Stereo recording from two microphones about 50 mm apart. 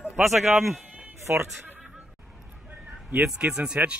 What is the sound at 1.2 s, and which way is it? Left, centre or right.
Speech, right.